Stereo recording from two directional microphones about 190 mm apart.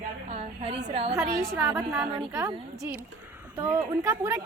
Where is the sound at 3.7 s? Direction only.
20° right (ahead or behind).